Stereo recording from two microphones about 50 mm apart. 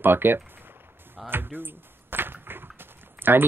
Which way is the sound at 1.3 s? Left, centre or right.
Right.